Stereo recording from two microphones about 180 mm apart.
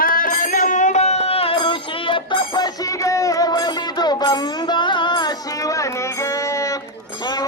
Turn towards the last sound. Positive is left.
turn(degrees=20)  # may be behind; listen again after turning